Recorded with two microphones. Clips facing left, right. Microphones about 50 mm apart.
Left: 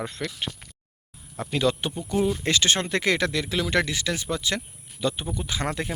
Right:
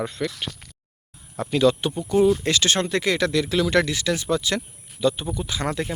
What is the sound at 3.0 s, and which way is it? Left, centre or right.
Speech, left.